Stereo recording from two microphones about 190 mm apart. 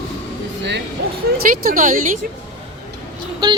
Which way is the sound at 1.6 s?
45° right (ahead or behind).